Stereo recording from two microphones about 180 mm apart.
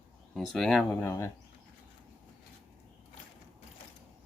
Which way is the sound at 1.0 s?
15° left (ahead or behind).